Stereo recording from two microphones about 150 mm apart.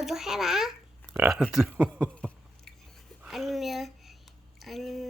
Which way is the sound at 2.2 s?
5° left (ahead or behind).